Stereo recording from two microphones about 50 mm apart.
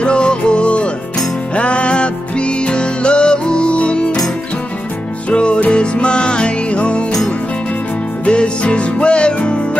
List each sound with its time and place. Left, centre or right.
0.0 s music: centre
5.3 s music: left
8.3 s music: left